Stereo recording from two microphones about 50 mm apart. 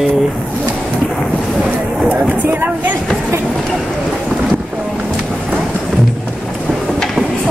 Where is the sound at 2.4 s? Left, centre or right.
Right.